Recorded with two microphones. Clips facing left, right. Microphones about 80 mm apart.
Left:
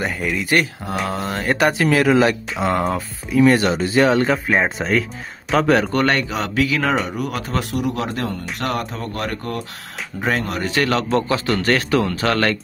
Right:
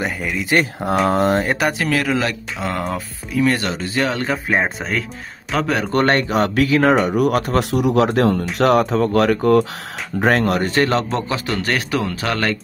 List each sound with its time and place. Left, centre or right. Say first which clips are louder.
0.0 s speech: even; centre
1.0 s speech: right 9 dB; right
1.6 s speech: left 3 dB; centre
1.9 s speech: left 4 dB; centre
5.9 s speech: right 2 dB; right
7.1 s speech: right 8 dB; right
10.7 s a man's voice: right 1 dB; right
11.5 s speech: left 3 dB; centre